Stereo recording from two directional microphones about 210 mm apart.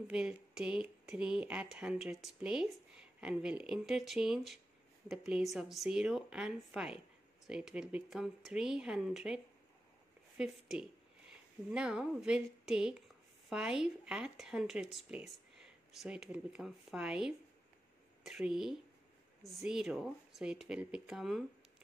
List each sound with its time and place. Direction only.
0.1 s a woman's voice: 5° right (ahead or behind)